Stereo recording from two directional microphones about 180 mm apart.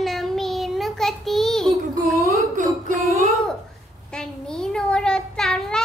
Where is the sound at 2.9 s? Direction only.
45° right (ahead or behind).